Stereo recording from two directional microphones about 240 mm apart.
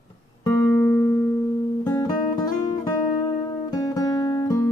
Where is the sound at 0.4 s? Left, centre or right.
Centre.